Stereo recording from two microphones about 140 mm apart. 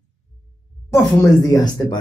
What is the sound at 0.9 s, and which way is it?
Speech, 20° left (ahead or behind).